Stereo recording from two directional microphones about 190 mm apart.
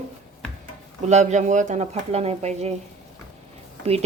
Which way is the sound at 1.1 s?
40° right (ahead or behind).